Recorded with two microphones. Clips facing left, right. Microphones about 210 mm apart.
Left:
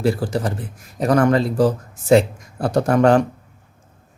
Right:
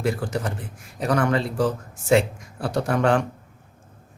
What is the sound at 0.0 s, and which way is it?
A man's voice, 35° left (ahead or behind).